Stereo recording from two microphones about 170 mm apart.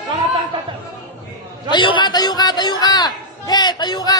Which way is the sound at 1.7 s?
30° left (ahead or behind).